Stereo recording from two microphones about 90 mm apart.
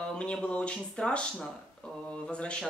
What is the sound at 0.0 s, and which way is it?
Speech, 10° left (ahead or behind).